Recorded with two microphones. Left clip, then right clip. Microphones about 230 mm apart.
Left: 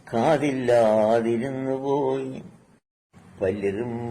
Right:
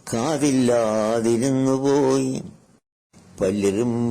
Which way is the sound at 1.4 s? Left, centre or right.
Right.